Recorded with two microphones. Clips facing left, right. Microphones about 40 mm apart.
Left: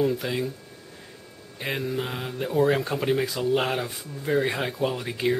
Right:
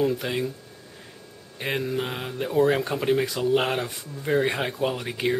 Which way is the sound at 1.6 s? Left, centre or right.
Centre.